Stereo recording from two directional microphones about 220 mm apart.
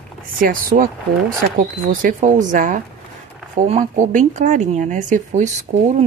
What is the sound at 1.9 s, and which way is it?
Speech, 40° right (ahead or behind).